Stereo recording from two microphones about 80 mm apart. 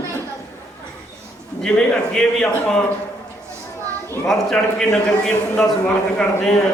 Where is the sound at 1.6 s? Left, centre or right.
Centre.